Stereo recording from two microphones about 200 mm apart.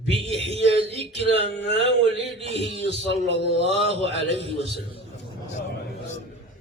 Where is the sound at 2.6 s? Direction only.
60° left (ahead or behind).